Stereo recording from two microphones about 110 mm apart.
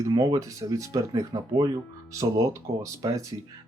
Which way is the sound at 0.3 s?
30° right (ahead or behind).